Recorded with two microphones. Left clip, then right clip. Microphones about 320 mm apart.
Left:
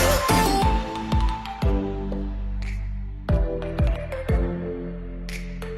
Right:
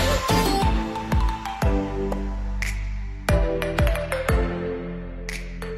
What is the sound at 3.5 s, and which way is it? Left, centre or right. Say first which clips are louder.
Music: right 5 dB; right.